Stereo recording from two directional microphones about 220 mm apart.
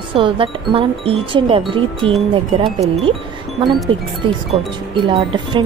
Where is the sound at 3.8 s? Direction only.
25° right (ahead or behind).